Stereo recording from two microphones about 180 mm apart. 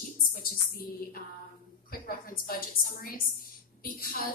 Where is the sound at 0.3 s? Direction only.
50° left (ahead or behind).